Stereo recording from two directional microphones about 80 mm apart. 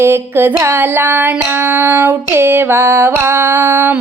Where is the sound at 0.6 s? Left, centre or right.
Right.